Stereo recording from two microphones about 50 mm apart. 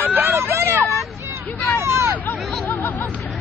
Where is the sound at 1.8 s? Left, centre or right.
Right.